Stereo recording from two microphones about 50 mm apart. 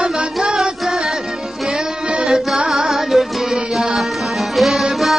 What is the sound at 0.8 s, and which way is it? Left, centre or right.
Music, centre.